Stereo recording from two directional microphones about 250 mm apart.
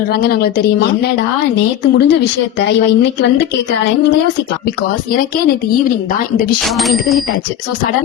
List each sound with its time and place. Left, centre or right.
0.1 s a woman's voice: left
6.7 s speech: centre